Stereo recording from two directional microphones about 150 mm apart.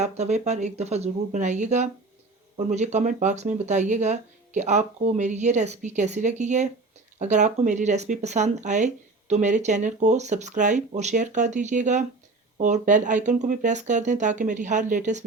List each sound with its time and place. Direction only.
0.0 s speech: 50° right (ahead or behind)